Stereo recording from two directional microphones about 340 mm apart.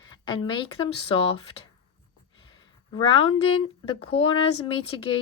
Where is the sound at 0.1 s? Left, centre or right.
Centre.